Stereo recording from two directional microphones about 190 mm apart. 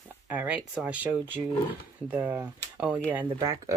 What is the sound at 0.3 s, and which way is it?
Speech, 5° right (ahead or behind).